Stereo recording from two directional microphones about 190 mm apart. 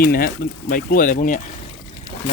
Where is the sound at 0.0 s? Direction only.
55° left (ahead or behind).